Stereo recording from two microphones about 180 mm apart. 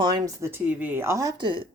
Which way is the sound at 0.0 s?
20° right (ahead or behind).